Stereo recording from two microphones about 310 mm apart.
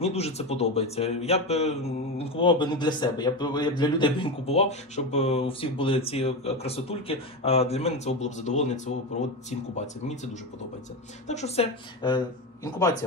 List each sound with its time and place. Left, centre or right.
0.0 s speech: centre